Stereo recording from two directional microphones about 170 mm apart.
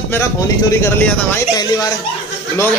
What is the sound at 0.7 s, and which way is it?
Speech, 15° left (ahead or behind).